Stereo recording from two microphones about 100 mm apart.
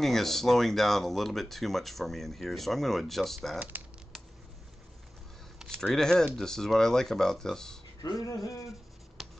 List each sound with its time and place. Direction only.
0.0 s speech: 5° left (ahead or behind)
3.5 s speech: 15° right (ahead or behind)
5.8 s speech: 5° left (ahead or behind)
8.0 s a sound: 35° left (ahead or behind)
9.2 s writing: centre (ahead or behind)